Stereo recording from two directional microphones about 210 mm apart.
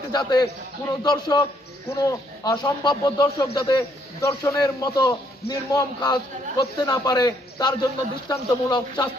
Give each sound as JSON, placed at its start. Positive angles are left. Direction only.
{"t": 0.1, "sound": "speech", "side_deg": 20}